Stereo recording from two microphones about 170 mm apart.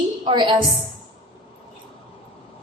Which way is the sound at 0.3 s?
30° right (ahead or behind).